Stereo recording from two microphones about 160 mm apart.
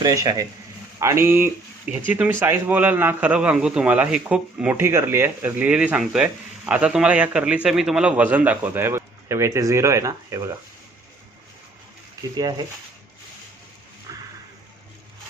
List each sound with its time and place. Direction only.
0.0 s a man's voice: 20° right (ahead or behind)
12.4 s a man's voice: 25° right (ahead or behind)
14.1 s a sound: 25° right (ahead or behind)